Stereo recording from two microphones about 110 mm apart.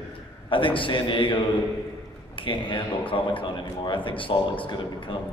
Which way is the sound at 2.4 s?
50° left (ahead or behind).